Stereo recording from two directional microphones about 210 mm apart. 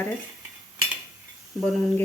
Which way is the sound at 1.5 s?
Centre (ahead or behind).